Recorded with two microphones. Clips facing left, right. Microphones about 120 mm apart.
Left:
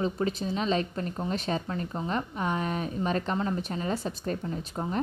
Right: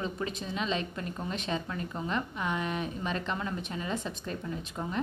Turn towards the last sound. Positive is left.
turn(degrees=40)  # may be behind; listen again after turning